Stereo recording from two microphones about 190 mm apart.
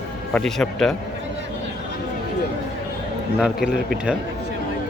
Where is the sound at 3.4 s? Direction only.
Centre (ahead or behind).